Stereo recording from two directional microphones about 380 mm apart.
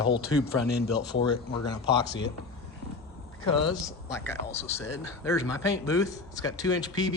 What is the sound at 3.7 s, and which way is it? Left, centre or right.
A man's voice, centre.